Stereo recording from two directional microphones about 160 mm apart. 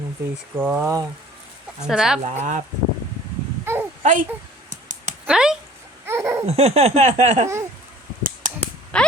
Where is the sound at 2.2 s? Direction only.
50° right (ahead or behind).